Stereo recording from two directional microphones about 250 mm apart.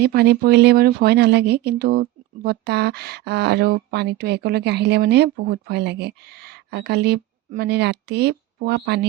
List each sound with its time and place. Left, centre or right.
0.0 s speech: right